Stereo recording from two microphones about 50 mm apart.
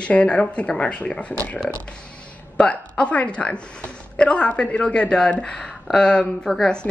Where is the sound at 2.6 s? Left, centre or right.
Left; by 6.6 s centre.